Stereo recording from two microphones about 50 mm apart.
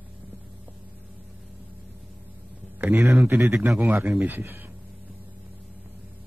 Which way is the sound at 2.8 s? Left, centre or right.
Right.